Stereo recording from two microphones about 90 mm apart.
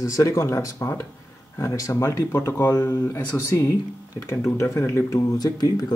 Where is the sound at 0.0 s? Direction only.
35° left (ahead or behind).